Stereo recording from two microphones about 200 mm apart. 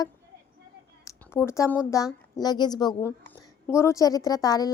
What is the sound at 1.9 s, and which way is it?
A woman's voice, 20° left (ahead or behind).